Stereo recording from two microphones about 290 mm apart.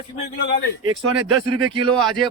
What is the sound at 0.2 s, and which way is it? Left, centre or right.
Speech, left.